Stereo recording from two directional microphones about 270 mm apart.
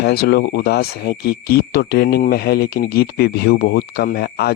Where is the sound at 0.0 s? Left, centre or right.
Left.